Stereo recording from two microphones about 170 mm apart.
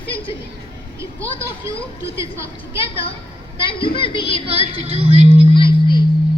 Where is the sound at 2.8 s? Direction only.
35° left (ahead or behind).